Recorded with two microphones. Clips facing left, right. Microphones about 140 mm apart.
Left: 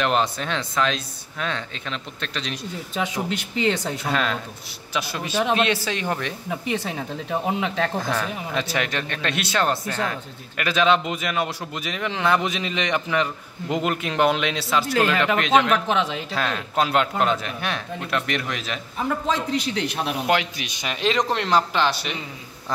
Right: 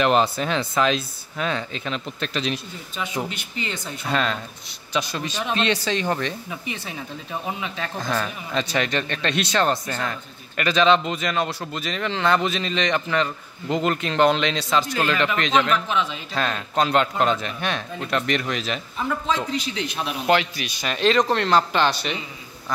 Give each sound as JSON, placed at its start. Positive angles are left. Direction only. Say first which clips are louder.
{"t": 0.0, "sound": "speech", "louder": "right 3 dB", "side_deg": -5}
{"t": 2.9, "sound": "speech", "louder": "left 2 dB", "side_deg": 90}
{"t": 4.1, "sound": "speech", "louder": "right 2 dB", "side_deg": 5}
{"t": 6.7, "sound": "speech", "louder": "left 7 dB", "side_deg": 70}
{"t": 8.2, "sound": "speech", "louder": "even", "side_deg": 5}
{"t": 15.9, "sound": "speech", "louder": "left 2 dB", "side_deg": 75}
{"t": 16.3, "sound": "speech", "louder": "right 1 dB", "side_deg": 5}
{"t": 18.9, "sound": "a man's voice", "louder": "left 1 dB", "side_deg": 45}
{"t": 20.2, "sound": "speech", "louder": "right 5 dB", "side_deg": 15}